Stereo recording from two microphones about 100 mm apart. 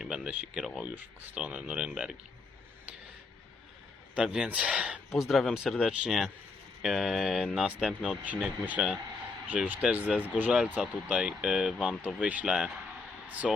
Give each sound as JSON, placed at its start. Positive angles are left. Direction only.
{"t": 0.0, "sound": "speech", "side_deg": -5}
{"t": 4.1, "sound": "speech", "side_deg": -10}
{"t": 8.2, "sound": "speech", "side_deg": -15}